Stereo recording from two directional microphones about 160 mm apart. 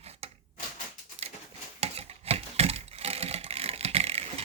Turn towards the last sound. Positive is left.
turn(degrees=-40)  # may be behind; listen again after turning